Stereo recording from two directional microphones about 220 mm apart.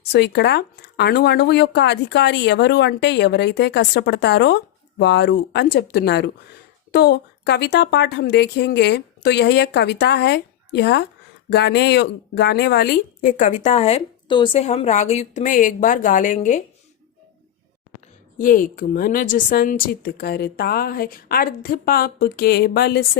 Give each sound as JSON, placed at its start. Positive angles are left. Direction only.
{"t": 0.1, "sound": "a woman's voice", "side_deg": 50}
{"t": 18.3, "sound": "a woman's voice", "side_deg": 40}